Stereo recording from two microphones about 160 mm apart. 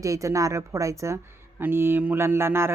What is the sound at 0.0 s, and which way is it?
A woman's voice, 20° right (ahead or behind).